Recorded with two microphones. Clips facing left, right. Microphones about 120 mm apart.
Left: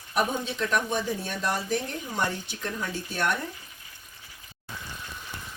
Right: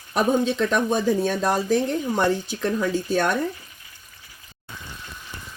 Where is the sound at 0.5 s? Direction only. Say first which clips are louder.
Right 6 dB; 90° right.